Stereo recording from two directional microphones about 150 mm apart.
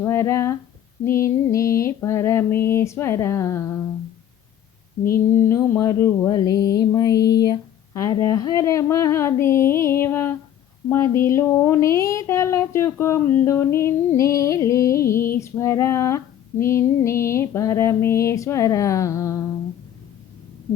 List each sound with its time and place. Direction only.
0.0 s speech: 15° left (ahead or behind)
5.1 s female singing: 15° left (ahead or behind)
7.2 s a sound: 90° left
7.4 s a sound: 25° left (ahead or behind)
8.1 s speech: 20° left (ahead or behind)
15.4 s female singing: 20° left (ahead or behind)